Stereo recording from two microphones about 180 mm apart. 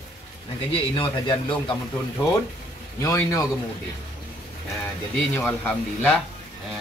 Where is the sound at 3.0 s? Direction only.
20° left (ahead or behind).